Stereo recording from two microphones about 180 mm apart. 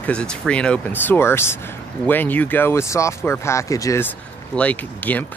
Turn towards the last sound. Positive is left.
turn(degrees=10)  # may be behind; listen again after turning